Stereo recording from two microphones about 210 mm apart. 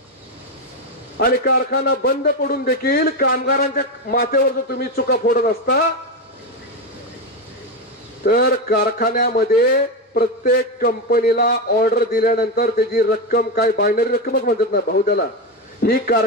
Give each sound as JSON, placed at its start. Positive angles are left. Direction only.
{"t": 1.1, "sound": "a man's voice", "side_deg": 45}
{"t": 8.2, "sound": "a man's voice", "side_deg": 50}